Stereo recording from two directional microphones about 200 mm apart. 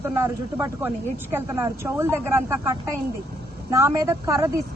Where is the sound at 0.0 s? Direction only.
10° right (ahead or behind).